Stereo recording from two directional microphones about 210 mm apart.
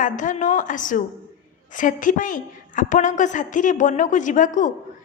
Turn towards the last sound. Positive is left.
turn(degrees=40)  # may be behind; listen again after turning